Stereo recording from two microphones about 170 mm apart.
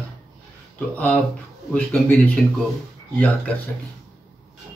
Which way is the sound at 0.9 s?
10° left (ahead or behind).